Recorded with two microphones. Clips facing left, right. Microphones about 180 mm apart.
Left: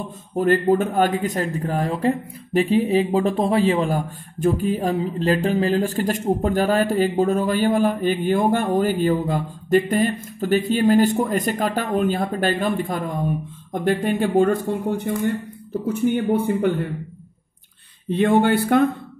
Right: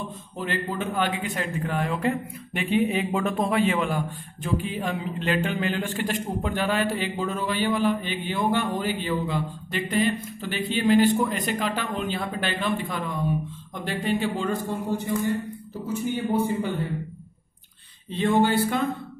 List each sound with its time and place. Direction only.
0.4 s a man's voice: 45° left (ahead or behind)
18.1 s speech: 55° left (ahead or behind)